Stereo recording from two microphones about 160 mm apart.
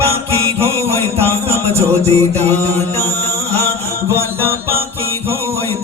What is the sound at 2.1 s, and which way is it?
Mantra, 40° right (ahead or behind).